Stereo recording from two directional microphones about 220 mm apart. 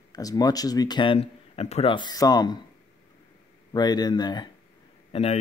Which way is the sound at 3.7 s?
20° left (ahead or behind).